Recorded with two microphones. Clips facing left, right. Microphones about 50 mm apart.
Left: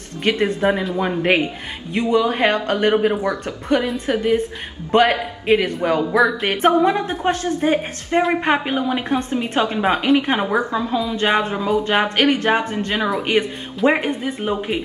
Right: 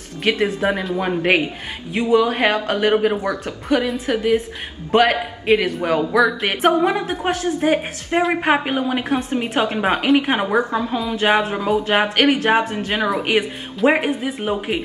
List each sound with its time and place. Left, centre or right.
0.2 s a woman's voice: centre
10.6 s a woman's voice: right
11.1 s a woman's voice: centre